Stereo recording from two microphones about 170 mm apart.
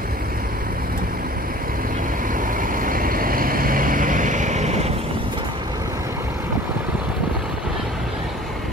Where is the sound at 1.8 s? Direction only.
55° right (ahead or behind).